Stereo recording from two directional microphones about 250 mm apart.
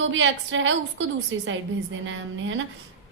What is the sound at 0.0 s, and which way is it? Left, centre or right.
A woman's voice, right.